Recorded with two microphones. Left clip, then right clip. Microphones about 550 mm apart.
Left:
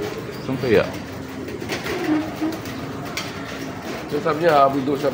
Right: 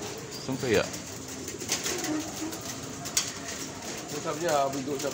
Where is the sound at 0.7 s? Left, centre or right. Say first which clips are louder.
Left 9 dB; right.